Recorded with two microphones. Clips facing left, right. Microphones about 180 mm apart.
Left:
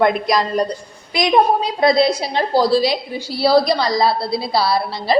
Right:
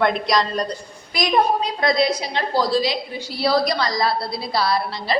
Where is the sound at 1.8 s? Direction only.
30° left (ahead or behind).